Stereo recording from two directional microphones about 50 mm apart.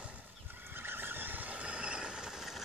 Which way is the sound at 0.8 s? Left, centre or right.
Right.